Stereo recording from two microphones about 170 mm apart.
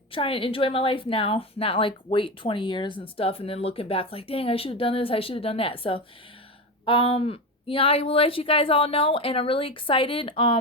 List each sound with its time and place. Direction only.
0.1 s a woman's voice: 30° left (ahead or behind)